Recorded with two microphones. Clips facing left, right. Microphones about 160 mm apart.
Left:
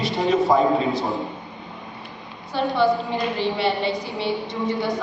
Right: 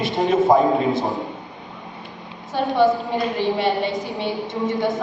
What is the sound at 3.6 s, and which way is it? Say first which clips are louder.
A man's voice: right 1 dB; 50° right (ahead or behind).